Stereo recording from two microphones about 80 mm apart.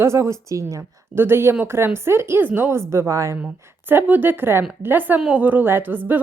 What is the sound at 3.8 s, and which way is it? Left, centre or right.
A woman's voice, right.